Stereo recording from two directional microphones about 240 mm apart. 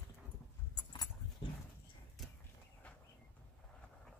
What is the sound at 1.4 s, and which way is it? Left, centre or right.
Dog, centre.